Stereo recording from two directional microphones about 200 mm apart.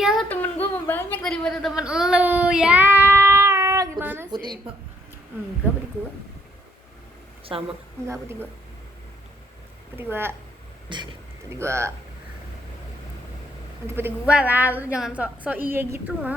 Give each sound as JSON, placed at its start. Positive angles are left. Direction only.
{"t": 0.0, "sound": "a sound", "side_deg": 0}
{"t": 4.4, "sound": "a woman's voice", "side_deg": -20}
{"t": 5.6, "sound": "a woman's voice", "side_deg": -10}
{"t": 7.5, "sound": "a woman's voice", "side_deg": -25}
{"t": 8.0, "sound": "a woman's voice", "side_deg": -15}
{"t": 9.9, "sound": "a woman's voice", "side_deg": -10}
{"t": 10.8, "sound": "speech", "side_deg": -25}
{"t": 13.8, "sound": "a woman's voice", "side_deg": -10}